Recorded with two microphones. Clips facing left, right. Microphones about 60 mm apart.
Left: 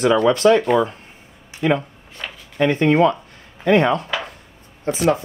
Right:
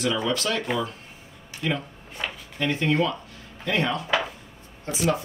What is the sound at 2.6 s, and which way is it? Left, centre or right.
Speech, left.